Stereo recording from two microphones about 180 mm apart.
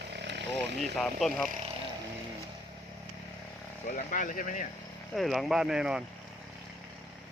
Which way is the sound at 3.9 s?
45° left (ahead or behind).